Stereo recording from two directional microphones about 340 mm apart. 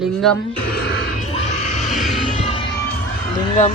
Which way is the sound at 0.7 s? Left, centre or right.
Left.